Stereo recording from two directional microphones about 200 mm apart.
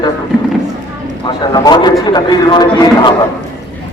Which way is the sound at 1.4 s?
20° left (ahead or behind).